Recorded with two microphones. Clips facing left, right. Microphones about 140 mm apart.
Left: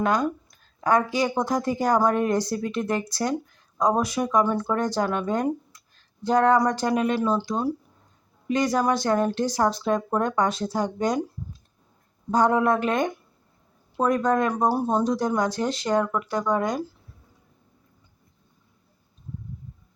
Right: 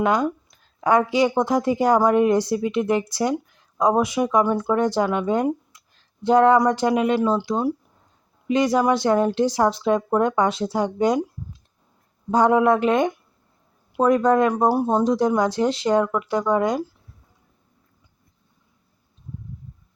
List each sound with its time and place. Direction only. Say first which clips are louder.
0.0 s speech: right 3 dB; 20° right (ahead or behind)
12.3 s speech: right 4 dB; 20° right (ahead or behind)